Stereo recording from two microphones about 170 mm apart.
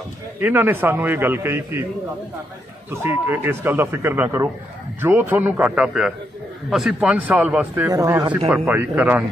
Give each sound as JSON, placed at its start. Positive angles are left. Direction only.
{"t": 0.4, "sound": "a man's voice", "side_deg": -10}
{"t": 2.9, "sound": "a man's voice", "side_deg": -15}
{"t": 7.9, "sound": "speech", "side_deg": -20}
{"t": 8.5, "sound": "a man's voice", "side_deg": -10}